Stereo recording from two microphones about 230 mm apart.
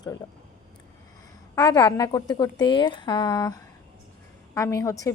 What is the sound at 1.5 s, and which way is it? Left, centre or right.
A woman's voice, centre.